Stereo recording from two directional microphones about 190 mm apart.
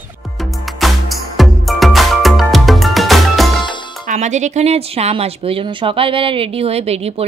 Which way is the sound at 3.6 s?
25° left (ahead or behind).